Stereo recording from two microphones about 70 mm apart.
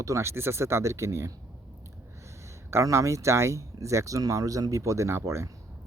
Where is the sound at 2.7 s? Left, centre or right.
Right.